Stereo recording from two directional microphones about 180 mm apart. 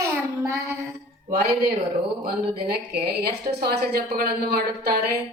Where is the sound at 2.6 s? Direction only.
60° right (ahead or behind).